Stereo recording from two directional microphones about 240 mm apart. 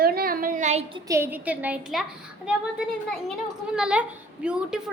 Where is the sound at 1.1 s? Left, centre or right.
Centre.